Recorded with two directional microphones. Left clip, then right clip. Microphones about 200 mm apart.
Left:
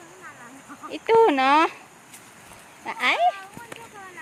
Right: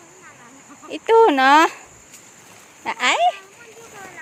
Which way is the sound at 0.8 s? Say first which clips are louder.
Right 4 dB; 25° right (ahead or behind).